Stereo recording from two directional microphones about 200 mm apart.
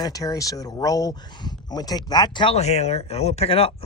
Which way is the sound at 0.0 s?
20° left (ahead or behind).